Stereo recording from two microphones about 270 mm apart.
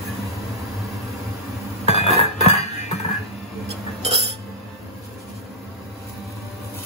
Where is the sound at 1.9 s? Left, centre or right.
Left.